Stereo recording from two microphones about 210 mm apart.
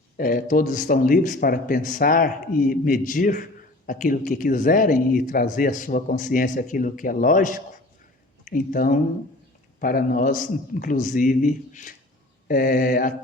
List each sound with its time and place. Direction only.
0.2 s speech: 40° left (ahead or behind)
12.5 s mantra: 45° left (ahead or behind)